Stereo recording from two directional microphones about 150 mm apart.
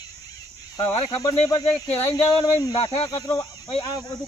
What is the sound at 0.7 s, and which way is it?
Speech, 25° left (ahead or behind).